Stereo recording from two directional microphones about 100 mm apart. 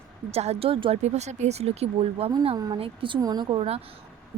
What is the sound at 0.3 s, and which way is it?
Speech, 90° right.